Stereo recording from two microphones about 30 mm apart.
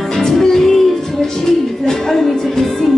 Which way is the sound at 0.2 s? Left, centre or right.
Centre.